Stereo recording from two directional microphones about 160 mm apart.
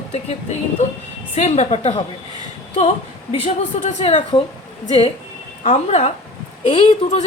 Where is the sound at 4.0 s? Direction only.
40° left (ahead or behind).